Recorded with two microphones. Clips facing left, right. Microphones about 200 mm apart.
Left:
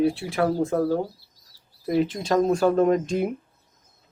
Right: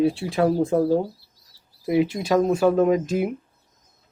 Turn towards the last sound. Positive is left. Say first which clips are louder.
# right 1 dB
turn(degrees=-5)  # may be behind; listen again after turning